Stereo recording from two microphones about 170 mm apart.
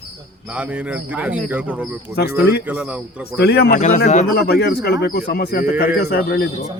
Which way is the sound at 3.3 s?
70° left (ahead or behind).